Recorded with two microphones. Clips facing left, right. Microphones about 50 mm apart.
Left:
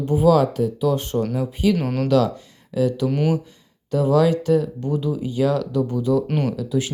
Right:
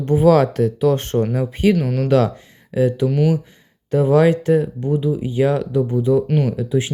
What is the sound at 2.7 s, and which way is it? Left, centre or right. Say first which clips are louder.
Speech: right 3 dB; right.